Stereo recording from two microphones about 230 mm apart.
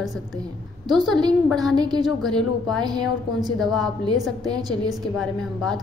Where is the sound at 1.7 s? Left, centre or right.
Centre.